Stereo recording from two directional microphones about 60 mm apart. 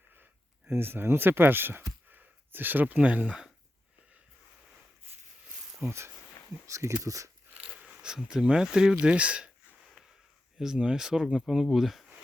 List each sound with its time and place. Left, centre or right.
0.7 s speech: right
2.0 s a sound: right
3.2 s speech: centre
5.8 s speech: right
6.7 s speech: right
7.8 s speech: centre
10.6 s speech: centre